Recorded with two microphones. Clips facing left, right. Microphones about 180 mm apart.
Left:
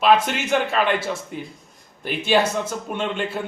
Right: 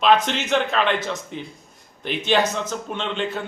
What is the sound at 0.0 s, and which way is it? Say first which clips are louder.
A man's voice: left 1 dB; 5° left (ahead or behind).